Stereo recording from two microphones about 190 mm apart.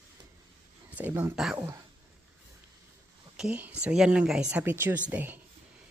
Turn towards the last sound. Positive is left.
turn(degrees=-10)  # may be behind; listen again after turning